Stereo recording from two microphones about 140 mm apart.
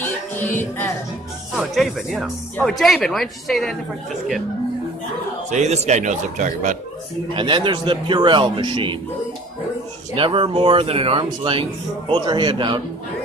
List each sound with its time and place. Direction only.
0.0 s music: 15° left (ahead or behind)
1.5 s speech: 5° right (ahead or behind)
5.5 s speech: 55° right (ahead or behind)
7.3 s a man's voice: 35° right (ahead or behind)
10.1 s a man's voice: 40° right (ahead or behind)